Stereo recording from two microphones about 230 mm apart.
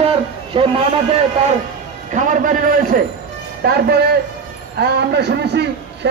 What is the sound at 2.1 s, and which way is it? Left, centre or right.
A man's voice, right.